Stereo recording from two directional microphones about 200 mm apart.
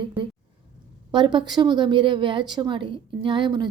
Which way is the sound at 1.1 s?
25° right (ahead or behind).